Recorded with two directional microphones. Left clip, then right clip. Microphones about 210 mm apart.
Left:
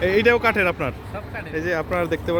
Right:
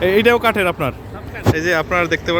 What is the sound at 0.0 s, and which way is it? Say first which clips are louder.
Speech: right 4 dB; 20° right (ahead or behind).